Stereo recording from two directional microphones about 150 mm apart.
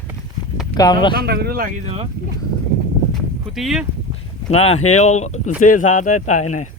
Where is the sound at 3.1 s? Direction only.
Centre (ahead or behind).